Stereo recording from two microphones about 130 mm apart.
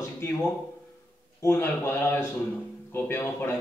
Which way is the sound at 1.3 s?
20° left (ahead or behind).